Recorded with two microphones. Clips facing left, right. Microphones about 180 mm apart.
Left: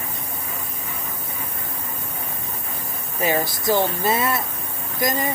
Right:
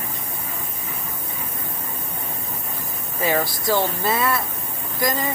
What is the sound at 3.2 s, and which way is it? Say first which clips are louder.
Speech: even; 15° left (ahead or behind).